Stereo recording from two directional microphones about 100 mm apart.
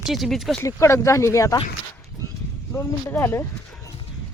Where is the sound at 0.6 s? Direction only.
30° left (ahead or behind).